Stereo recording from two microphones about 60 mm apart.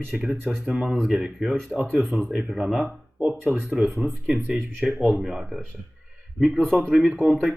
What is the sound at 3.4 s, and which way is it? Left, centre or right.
Speech, right.